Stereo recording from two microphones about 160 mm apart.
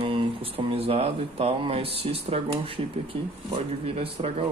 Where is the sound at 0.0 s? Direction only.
35° right (ahead or behind).